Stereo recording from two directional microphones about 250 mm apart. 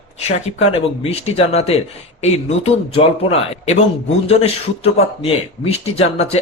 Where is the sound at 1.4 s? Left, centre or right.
Left.